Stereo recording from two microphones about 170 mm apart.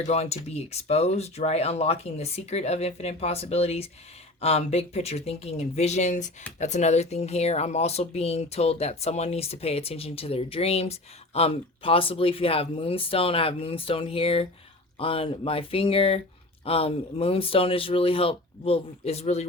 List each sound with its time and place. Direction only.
0.1 s speech: 40° left (ahead or behind)